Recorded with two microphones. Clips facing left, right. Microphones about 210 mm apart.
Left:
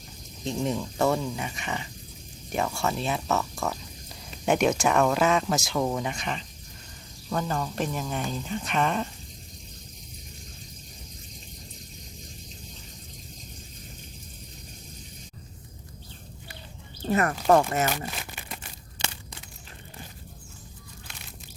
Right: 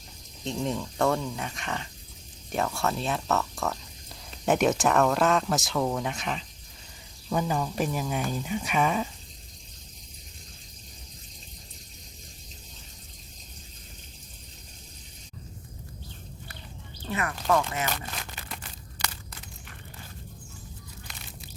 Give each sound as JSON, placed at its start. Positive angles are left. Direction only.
{"t": 0.4, "sound": "speech", "side_deg": 5}
{"t": 17.1, "sound": "speech", "side_deg": 45}
{"t": 18.2, "sound": "a sound", "side_deg": 15}